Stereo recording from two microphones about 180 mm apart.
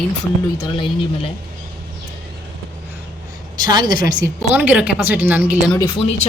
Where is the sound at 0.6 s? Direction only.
30° left (ahead or behind).